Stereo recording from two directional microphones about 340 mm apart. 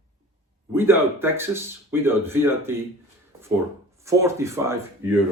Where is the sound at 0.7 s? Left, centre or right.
Centre.